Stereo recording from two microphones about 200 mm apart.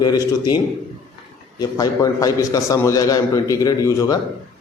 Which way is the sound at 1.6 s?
15° left (ahead or behind).